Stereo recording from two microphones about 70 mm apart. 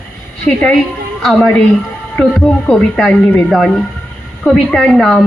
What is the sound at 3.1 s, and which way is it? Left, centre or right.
Speech, left.